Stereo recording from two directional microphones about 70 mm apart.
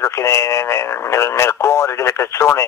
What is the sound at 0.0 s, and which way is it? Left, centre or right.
Speech, left.